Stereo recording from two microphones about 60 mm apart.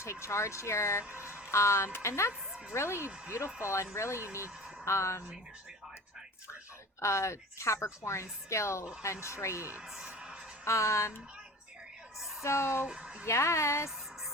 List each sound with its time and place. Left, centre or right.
0.0 s a woman's voice: left
2.5 s a sound: centre
2.7 s a woman's voice: left
7.0 s a woman's voice: left
9.8 s speech: centre
10.1 s music: centre
10.6 s speech: left
12.4 s speech: left
12.8 s a sound: centre
13.2 s a woman's voice: left